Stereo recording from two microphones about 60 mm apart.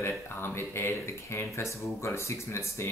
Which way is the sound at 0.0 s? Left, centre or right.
Left.